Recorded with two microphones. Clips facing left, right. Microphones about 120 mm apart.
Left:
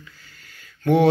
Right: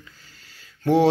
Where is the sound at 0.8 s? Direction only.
30° right (ahead or behind).